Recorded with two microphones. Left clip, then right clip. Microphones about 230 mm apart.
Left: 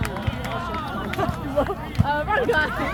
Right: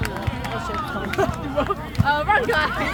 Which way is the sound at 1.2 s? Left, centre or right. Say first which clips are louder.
Right 1 dB; right.